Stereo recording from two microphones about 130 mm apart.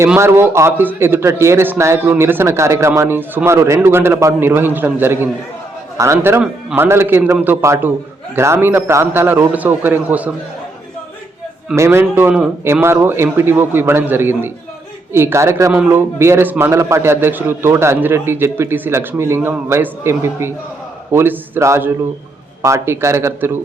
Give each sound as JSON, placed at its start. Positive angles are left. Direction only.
{"t": 0.2, "sound": "a man's voice", "side_deg": -20}
{"t": 11.8, "sound": "a man's voice", "side_deg": -20}